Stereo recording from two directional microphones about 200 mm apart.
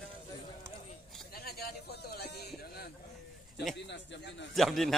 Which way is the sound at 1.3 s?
50° left (ahead or behind).